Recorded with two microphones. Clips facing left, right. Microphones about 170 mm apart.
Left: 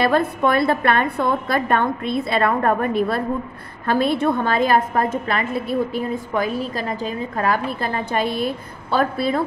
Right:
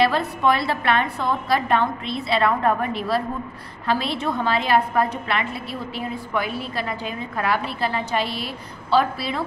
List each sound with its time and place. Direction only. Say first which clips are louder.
0.0 s a woman's voice: left 2 dB; 50° left (ahead or behind)